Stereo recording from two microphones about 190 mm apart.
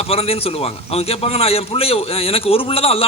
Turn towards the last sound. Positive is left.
turn(degrees=30)  # may be behind; listen again after turning